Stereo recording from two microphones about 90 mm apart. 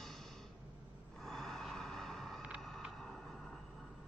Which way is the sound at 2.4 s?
10° right (ahead or behind).